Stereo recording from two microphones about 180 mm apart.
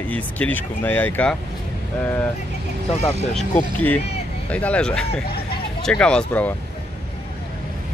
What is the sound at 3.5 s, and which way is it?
Speech, 10° left (ahead or behind).